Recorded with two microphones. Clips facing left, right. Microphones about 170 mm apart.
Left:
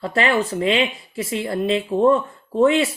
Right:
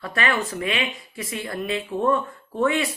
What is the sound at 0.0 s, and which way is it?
Speech, 25° left (ahead or behind).